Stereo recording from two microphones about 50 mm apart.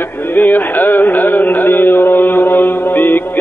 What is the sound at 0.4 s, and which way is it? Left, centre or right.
Carnatic music, left.